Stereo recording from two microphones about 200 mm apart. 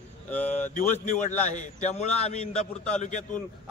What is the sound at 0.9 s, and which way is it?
A man's voice, 35° left (ahead or behind).